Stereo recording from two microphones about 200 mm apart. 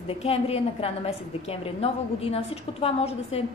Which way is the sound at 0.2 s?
30° left (ahead or behind).